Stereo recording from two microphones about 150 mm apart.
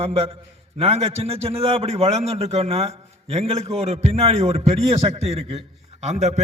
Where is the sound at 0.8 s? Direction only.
45° right (ahead or behind).